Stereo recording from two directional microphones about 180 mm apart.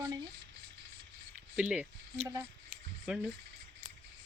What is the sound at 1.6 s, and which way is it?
Speech, 10° right (ahead or behind).